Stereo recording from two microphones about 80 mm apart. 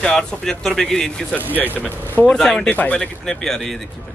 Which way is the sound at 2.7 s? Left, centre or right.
Centre.